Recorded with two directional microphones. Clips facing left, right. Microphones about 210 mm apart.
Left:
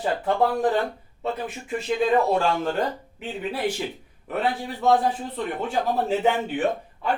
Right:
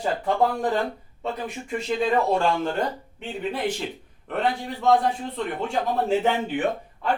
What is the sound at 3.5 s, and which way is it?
Speech, 5° left (ahead or behind).